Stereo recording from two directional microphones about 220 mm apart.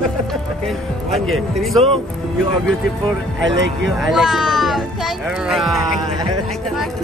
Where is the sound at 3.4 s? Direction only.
55° right (ahead or behind).